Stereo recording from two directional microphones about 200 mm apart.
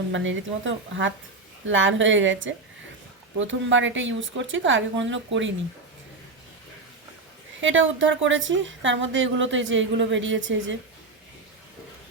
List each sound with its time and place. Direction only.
0.1 s a woman's voice: 70° right (ahead or behind)
7.6 s a woman's voice: 70° right (ahead or behind)